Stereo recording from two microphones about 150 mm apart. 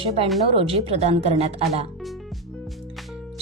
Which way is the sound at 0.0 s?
40° right (ahead or behind).